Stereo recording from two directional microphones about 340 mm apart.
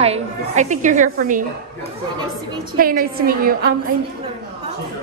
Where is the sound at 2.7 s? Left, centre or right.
Right.